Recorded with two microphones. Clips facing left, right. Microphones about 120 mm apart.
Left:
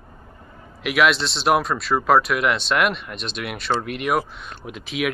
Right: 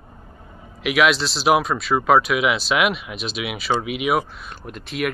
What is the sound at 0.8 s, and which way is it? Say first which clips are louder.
Speech: right 1 dB; centre (ahead or behind).